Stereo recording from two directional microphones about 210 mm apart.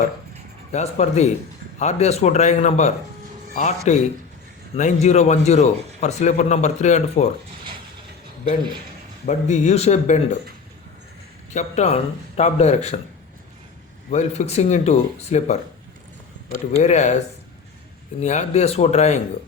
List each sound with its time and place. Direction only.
0.7 s a man's voice: 30° left (ahead or behind)
9.2 s a man's voice: 35° left (ahead or behind)
11.5 s a man's voice: 30° left (ahead or behind)
14.1 s a man's voice: 30° left (ahead or behind)
16.8 s a man's voice: 35° left (ahead or behind)
18.2 s a man's voice: 35° left (ahead or behind)